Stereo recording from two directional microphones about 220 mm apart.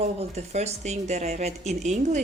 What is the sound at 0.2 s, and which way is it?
A woman's voice, 30° right (ahead or behind).